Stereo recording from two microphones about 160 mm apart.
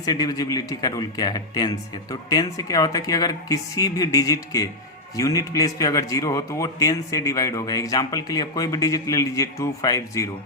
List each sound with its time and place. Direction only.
0.0 s a man's voice: 25° left (ahead or behind)